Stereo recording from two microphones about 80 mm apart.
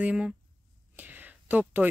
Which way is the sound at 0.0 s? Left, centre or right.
Centre.